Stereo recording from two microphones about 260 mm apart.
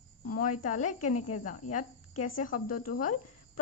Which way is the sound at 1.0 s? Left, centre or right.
Left.